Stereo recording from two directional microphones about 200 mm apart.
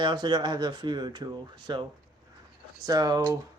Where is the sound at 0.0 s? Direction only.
20° right (ahead or behind).